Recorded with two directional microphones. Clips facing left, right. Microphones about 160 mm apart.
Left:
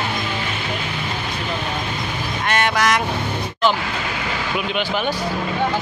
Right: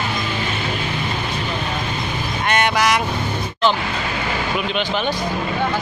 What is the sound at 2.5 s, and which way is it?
Vehicle, centre (ahead or behind).